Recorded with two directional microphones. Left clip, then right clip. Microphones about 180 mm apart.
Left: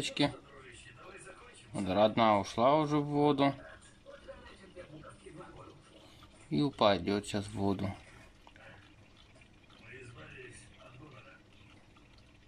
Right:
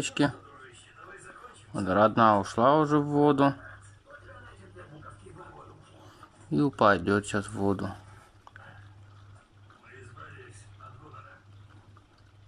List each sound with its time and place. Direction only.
0.0 s speech: 5° right (ahead or behind)
1.7 s speech: 5° right (ahead or behind)
6.5 s speech: 5° right (ahead or behind)